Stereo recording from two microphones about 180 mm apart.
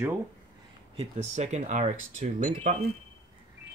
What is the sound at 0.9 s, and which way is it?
Speech, 35° right (ahead or behind).